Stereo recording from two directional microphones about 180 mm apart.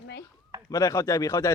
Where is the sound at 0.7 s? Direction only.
20° left (ahead or behind).